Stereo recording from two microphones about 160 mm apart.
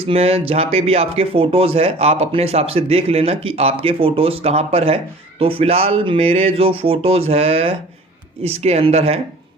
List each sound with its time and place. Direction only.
0.1 s speech: 40° right (ahead or behind)